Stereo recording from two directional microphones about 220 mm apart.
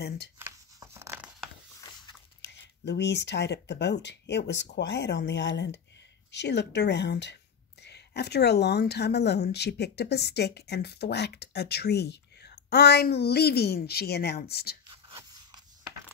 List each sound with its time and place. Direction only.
0.4 s tearing: 10° right (ahead or behind)
2.4 s a woman's voice: 50° left (ahead or behind)
14.9 s whispering: 20° right (ahead or behind)